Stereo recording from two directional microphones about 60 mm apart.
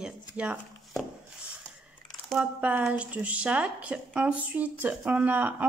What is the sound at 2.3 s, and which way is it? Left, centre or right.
Speech, right.